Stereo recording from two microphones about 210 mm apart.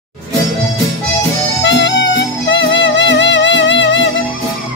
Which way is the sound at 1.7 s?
55° left (ahead or behind).